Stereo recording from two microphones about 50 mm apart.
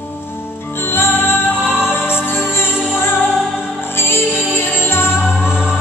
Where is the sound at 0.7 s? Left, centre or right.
Left.